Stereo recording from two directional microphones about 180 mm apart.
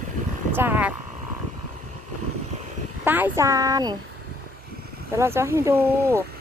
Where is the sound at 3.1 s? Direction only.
10° right (ahead or behind).